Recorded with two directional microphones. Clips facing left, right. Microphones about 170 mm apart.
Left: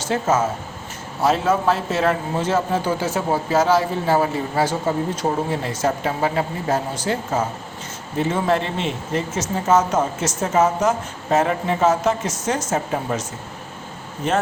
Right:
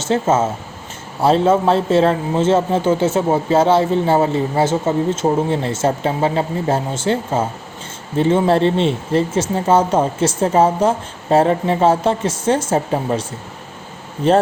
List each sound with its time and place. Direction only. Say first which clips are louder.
0.0 s a man's voice: right 4 dB; 25° right (ahead or behind)
14.2 s speech: right 7 dB; 30° right (ahead or behind)